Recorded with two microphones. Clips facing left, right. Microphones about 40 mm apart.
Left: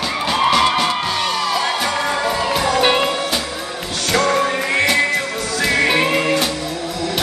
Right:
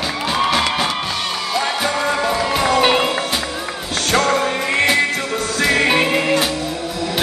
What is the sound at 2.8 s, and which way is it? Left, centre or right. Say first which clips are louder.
Music: left 1 dB; centre.